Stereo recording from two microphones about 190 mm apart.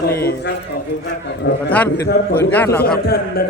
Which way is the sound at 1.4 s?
50° left (ahead or behind).